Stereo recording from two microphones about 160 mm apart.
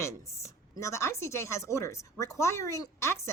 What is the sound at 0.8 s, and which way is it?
A woman's voice, 20° left (ahead or behind).